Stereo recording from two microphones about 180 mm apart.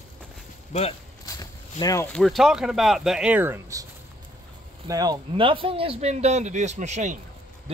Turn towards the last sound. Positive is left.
turn(degrees=-40)  # may be behind; listen again after turning